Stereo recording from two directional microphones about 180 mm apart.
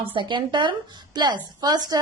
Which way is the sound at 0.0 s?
30° right (ahead or behind).